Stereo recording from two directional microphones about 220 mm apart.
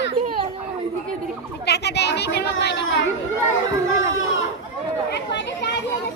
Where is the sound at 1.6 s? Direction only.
50° left (ahead or behind).